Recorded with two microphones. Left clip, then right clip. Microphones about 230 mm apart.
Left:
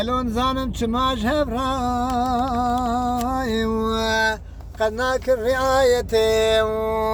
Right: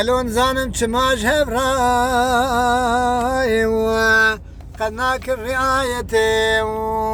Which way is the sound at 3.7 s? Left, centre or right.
Right.